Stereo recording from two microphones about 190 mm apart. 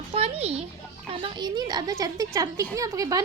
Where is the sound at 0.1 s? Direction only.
30° right (ahead or behind).